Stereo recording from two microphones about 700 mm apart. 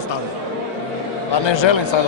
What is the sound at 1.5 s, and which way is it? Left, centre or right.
Speech, left.